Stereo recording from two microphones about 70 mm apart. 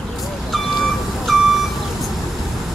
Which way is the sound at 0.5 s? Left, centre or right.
Centre.